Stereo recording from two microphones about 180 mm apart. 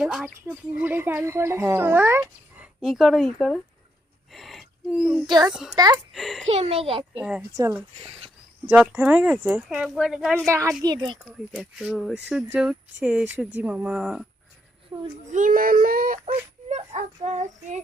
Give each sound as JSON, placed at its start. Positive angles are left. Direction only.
{"t": 0.0, "sound": "speech", "side_deg": -5}
{"t": 2.6, "sound": "speech", "side_deg": 0}
{"t": 4.3, "sound": "gasp", "side_deg": 0}
{"t": 5.2, "sound": "speech", "side_deg": -25}
{"t": 5.5, "sound": "speech", "side_deg": -5}
{"t": 5.7, "sound": "speech", "side_deg": -20}
{"t": 6.1, "sound": "speech", "side_deg": 0}
{"t": 6.5, "sound": "a child's voice", "side_deg": -35}
{"t": 7.2, "sound": "speech", "side_deg": -5}
{"t": 7.5, "sound": "speech", "side_deg": -15}
{"t": 8.6, "sound": "speech", "side_deg": -5}
{"t": 10.4, "sound": "speech", "side_deg": -15}
{"t": 11.3, "sound": "speech", "side_deg": -5}
{"t": 15.3, "sound": "a child's voice", "side_deg": -45}